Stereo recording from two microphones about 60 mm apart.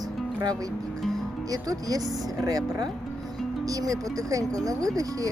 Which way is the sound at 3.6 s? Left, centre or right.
Right.